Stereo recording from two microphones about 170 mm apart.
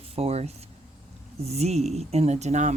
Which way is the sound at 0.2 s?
35° right (ahead or behind).